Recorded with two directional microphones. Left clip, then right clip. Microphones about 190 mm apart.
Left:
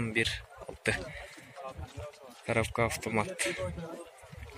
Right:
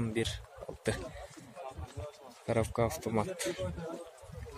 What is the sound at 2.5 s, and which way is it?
Speech, 15° right (ahead or behind).